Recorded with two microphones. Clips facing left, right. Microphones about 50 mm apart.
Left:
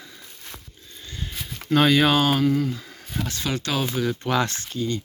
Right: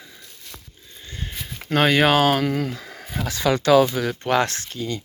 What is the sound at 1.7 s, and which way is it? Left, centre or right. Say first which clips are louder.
Speech: right 1 dB; right.